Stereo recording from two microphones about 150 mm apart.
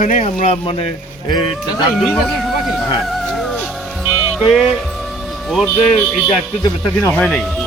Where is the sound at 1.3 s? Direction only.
30° left (ahead or behind).